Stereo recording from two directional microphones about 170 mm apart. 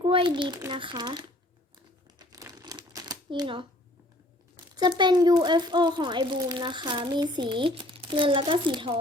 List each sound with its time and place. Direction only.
0.0 s a child's voice: 30° right (ahead or behind)
2.1 s crumpling: 20° right (ahead or behind)
4.8 s a child's voice: 25° right (ahead or behind)